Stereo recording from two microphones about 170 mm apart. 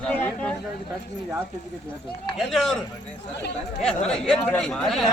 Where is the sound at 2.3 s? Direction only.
Centre (ahead or behind).